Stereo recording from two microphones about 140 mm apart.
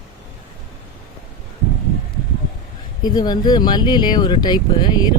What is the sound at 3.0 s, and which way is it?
Speech, 30° left (ahead or behind).